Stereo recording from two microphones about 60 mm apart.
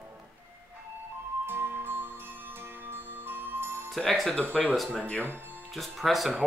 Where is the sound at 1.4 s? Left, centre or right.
Right.